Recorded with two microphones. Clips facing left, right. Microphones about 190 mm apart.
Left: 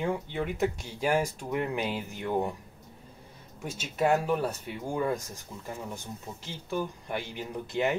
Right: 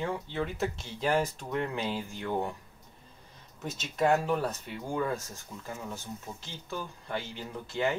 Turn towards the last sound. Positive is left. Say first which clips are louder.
# left 2 dB
turn(degrees=20)  # may be behind; listen again after turning